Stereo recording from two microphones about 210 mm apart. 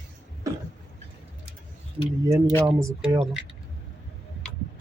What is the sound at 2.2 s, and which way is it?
Speech, 15° right (ahead or behind).